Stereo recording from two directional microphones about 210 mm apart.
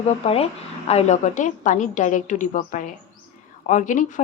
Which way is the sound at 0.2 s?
30° left (ahead or behind).